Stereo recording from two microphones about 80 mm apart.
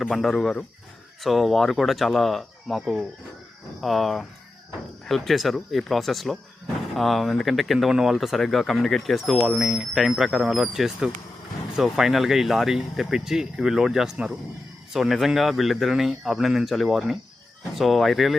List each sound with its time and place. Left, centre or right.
0.0 s speech: centre